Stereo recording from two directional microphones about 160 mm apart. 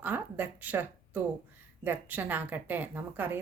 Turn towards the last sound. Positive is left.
turn(degrees=-10)  # may be behind; listen again after turning